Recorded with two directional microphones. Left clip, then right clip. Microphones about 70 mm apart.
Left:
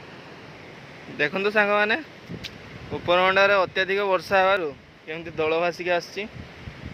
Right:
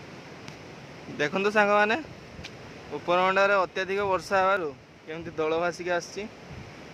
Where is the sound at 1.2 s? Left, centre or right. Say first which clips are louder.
Left 2 dB; right.